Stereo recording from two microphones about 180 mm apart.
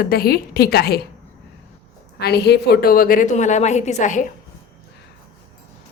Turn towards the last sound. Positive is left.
turn(degrees=45)  # may be behind; listen again after turning